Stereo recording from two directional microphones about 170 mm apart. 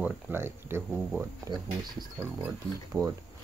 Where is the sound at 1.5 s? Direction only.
25° right (ahead or behind).